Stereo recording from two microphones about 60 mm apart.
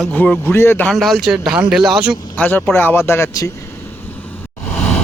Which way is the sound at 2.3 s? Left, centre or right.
Left.